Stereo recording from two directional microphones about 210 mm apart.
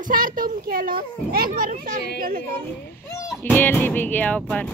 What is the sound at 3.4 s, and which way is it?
Speech, 10° left (ahead or behind).